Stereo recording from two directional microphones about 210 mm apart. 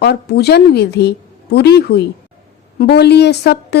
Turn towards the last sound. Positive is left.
turn(degrees=50)  # may be behind; listen again after turning